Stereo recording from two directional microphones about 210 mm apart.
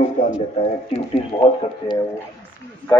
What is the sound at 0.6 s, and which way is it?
Speech, 30° left (ahead or behind).